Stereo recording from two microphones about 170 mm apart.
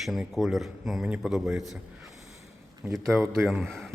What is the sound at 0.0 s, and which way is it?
Speech, centre (ahead or behind).